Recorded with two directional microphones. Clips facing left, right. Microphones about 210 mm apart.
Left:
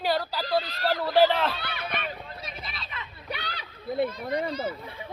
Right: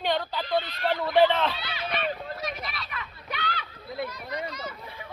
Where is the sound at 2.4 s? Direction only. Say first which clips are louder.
Right 5 dB; 30° left (ahead or behind).